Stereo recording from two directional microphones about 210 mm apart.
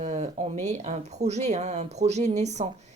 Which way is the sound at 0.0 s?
35° right (ahead or behind).